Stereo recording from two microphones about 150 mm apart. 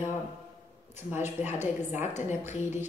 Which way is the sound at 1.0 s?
15° right (ahead or behind).